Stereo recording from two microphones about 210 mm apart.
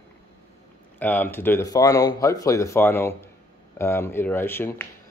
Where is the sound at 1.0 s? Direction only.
10° left (ahead or behind).